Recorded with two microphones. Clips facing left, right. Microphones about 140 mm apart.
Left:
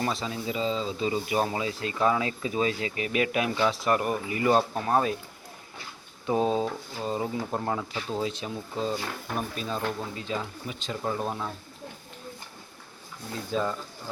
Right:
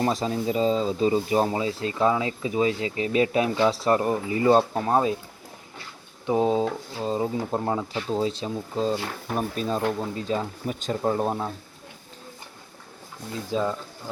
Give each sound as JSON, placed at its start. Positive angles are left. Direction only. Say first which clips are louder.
{"t": 0.0, "sound": "speech", "louder": "right 6 dB", "side_deg": -40}
{"t": 6.2, "sound": "speech", "louder": "right 3 dB", "side_deg": -20}
{"t": 11.0, "sound": "speech", "louder": "right 5 dB", "side_deg": -30}
{"t": 13.5, "sound": "speech", "louder": "right 3 dB", "side_deg": -20}